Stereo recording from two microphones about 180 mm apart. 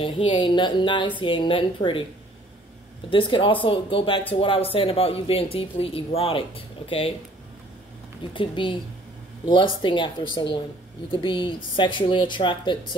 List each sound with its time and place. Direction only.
0.0 s a woman's voice: 30° left (ahead or behind)
3.1 s a woman's voice: 30° left (ahead or behind)
8.3 s a woman's voice: 25° left (ahead or behind)